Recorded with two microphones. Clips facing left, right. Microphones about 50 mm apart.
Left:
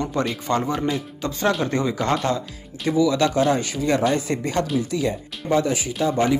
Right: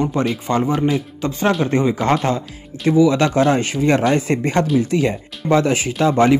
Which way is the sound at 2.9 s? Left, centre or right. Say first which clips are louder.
Right 5 dB; right.